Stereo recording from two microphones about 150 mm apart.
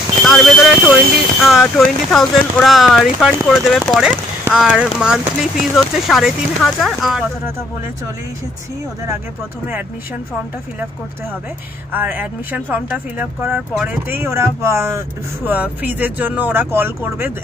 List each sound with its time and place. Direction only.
0.2 s a sound: centre (ahead or behind)
1.4 s speech: centre (ahead or behind)
11.9 s speech: 10° right (ahead or behind)